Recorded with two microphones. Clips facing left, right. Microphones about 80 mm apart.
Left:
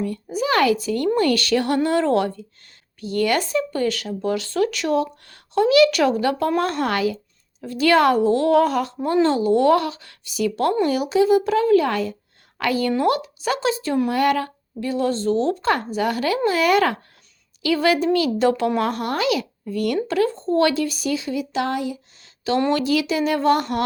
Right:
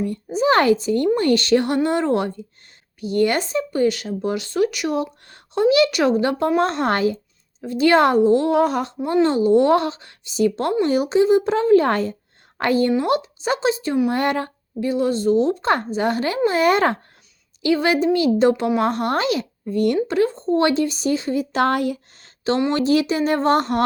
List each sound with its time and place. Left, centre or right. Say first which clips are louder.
0.0 s a woman's voice: right 4 dB; right
12.9 s speech: even; right
22.2 s a sound: even; right
22.7 s a woman's voice: right 2 dB; right